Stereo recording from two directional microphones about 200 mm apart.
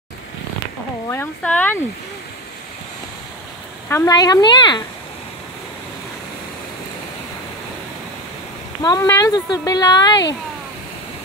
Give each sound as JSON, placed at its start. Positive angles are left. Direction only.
{"t": 1.0, "sound": "speech", "side_deg": 10}
{"t": 3.9, "sound": "speech", "side_deg": 15}
{"t": 8.8, "sound": "speech", "side_deg": 15}